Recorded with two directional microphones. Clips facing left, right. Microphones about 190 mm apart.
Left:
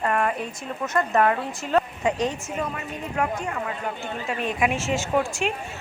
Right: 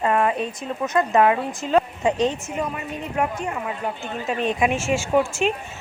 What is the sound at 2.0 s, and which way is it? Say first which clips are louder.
Speech: right 3 dB; 25° right (ahead or behind).